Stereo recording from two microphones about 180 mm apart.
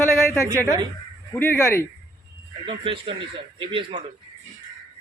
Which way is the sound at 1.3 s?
10° left (ahead or behind).